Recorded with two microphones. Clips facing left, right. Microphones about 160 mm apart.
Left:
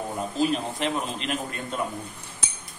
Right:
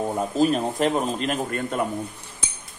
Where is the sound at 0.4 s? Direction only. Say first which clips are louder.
Right 5 dB; 45° right (ahead or behind).